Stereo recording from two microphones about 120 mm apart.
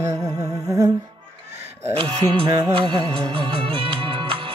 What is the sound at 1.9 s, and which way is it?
Music, 45° right (ahead or behind).